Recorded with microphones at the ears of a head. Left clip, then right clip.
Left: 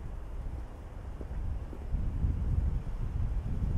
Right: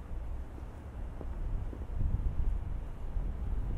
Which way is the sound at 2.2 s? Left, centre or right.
Left.